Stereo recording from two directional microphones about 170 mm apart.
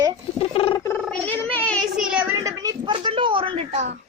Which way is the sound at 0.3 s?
35° left (ahead or behind).